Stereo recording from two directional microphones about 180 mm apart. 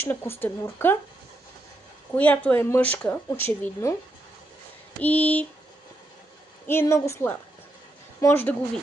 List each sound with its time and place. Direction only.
0.0 s speech: 10° left (ahead or behind)
2.1 s speech: 10° left (ahead or behind)
5.0 s speech: 10° left (ahead or behind)
6.7 s speech: 15° left (ahead or behind)